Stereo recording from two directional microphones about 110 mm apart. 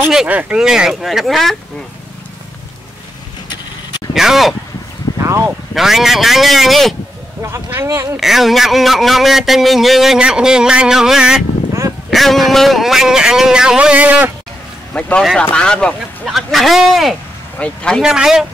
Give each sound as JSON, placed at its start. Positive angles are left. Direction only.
{"t": 0.0, "sound": "a man's voice", "side_deg": -10}
{"t": 4.1, "sound": "a man's voice", "side_deg": -5}
{"t": 5.2, "sound": "a sound", "side_deg": -25}
{"t": 5.8, "sound": "a man's voice", "side_deg": 0}
{"t": 7.4, "sound": "speech", "side_deg": -25}
{"t": 8.2, "sound": "a man's voice", "side_deg": 0}
{"t": 15.0, "sound": "a man's voice", "side_deg": 10}
{"t": 18.0, "sound": "a man's voice", "side_deg": -5}